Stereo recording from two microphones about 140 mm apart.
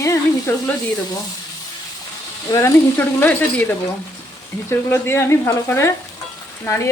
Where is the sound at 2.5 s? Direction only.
20° left (ahead or behind).